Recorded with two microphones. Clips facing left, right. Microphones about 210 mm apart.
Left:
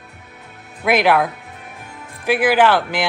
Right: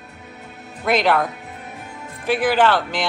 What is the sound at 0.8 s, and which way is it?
Speech, 10° left (ahead or behind).